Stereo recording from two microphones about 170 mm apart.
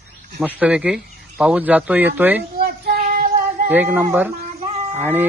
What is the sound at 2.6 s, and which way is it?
Child singing, 60° right (ahead or behind).